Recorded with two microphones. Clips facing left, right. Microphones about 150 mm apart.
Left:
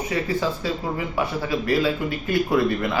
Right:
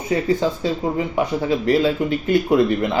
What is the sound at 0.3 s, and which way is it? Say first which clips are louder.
Speech: right 4 dB; 25° right (ahead or behind).